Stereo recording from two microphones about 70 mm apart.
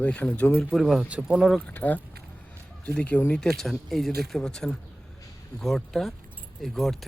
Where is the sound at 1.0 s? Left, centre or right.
Centre.